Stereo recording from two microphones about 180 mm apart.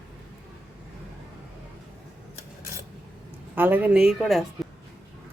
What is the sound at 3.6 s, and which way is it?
Speech, 10° right (ahead or behind).